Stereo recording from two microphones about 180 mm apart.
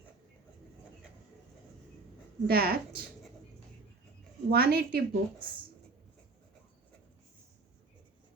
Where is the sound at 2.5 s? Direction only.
60° right (ahead or behind).